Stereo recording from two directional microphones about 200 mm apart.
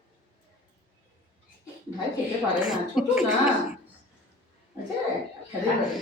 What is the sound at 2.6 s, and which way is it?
Speech, 5° right (ahead or behind).